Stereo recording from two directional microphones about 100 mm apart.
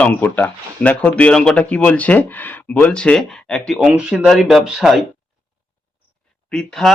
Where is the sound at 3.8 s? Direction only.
10° right (ahead or behind).